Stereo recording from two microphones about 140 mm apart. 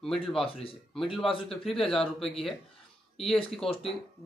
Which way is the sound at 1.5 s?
Centre (ahead or behind).